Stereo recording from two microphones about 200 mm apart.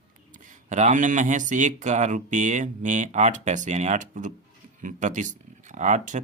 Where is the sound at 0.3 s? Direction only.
40° right (ahead or behind).